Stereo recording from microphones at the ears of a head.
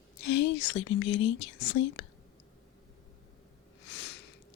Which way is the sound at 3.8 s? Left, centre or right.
Left.